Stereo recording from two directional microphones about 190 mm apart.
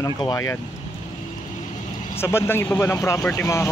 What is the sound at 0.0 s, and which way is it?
Speech, 20° left (ahead or behind).